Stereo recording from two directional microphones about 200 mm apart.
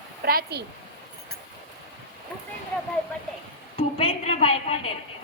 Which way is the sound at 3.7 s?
25° left (ahead or behind).